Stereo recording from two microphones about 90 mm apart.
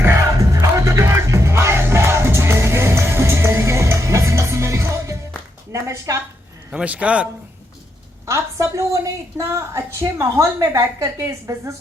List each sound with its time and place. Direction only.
0.0 s music: 30° right (ahead or behind)
5.7 s a sound: 35° right (ahead or behind)
6.7 s a man's voice: 15° right (ahead or behind)
8.3 s a woman's voice: 35° right (ahead or behind)